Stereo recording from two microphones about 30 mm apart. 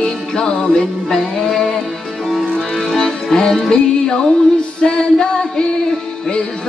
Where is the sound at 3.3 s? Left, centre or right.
Left.